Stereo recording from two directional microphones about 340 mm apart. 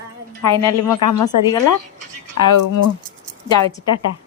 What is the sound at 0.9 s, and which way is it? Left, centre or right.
Speech, left.